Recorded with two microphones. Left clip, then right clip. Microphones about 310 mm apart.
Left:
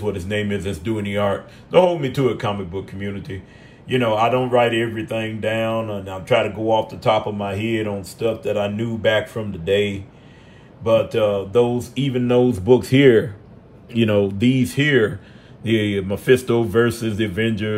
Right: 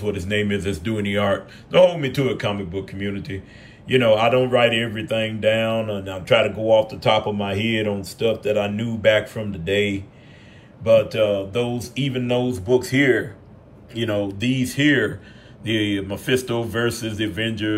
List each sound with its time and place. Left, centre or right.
0.0 s speech: centre